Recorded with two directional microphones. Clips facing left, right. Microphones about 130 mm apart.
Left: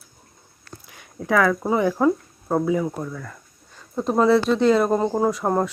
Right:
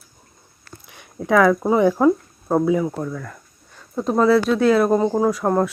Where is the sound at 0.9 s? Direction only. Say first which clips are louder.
Right 4 dB; 20° right (ahead or behind).